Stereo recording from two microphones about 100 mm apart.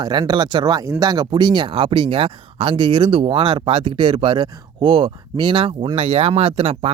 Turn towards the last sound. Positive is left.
turn(degrees=-65)  # may be behind; listen again after turning